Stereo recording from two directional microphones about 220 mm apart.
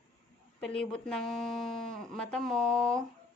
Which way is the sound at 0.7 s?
5° left (ahead or behind).